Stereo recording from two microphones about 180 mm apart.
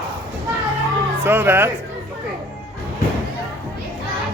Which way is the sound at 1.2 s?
15° right (ahead or behind).